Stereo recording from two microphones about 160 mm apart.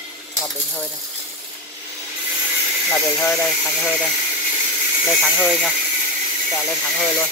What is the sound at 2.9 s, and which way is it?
Speech, 10° left (ahead or behind).